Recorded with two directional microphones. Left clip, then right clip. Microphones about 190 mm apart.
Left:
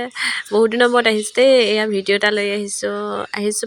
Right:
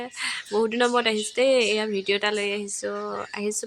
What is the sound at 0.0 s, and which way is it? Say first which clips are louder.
Speech: left 9 dB; 35° left (ahead or behind).